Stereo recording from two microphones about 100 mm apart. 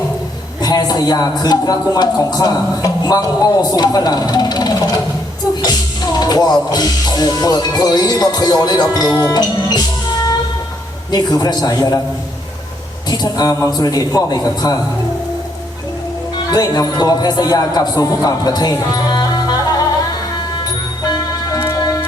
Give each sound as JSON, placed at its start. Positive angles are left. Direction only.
{"t": 0.6, "sound": "a man's voice", "side_deg": 40}
{"t": 6.1, "sound": "a man's voice", "side_deg": 40}
{"t": 11.1, "sound": "a man's voice", "side_deg": 40}
{"t": 13.1, "sound": "a man's voice", "side_deg": 40}
{"t": 16.5, "sound": "a man's voice", "side_deg": 40}
{"t": 21.1, "sound": "tick-tock", "side_deg": 40}